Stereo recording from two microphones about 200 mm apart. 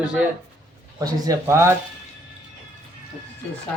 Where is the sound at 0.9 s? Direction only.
20° right (ahead or behind).